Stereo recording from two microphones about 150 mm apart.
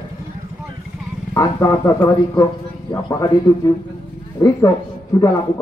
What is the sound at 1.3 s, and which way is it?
A man's voice, 25° left (ahead or behind).